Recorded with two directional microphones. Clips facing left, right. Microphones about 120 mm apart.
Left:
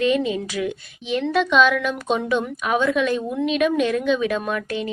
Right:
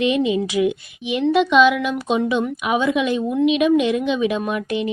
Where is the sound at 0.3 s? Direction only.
15° right (ahead or behind).